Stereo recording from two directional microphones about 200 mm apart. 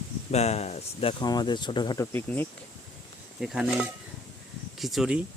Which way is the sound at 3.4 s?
Centre (ahead or behind).